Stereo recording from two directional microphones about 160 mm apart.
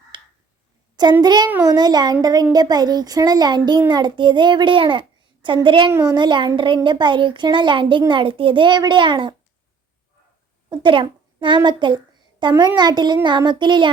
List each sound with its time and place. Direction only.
0.1 s a sound: 30° right (ahead or behind)
1.2 s a child's voice: 25° right (ahead or behind)
5.9 s a child's voice: 20° right (ahead or behind)
6.1 s a woman's voice: 30° right (ahead or behind)
10.7 s a woman's voice: 30° right (ahead or behind)